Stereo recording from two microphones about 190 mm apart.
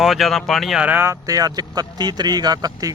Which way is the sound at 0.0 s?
Centre (ahead or behind).